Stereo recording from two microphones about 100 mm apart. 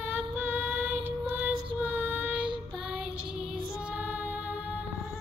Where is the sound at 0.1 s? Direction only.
20° right (ahead or behind).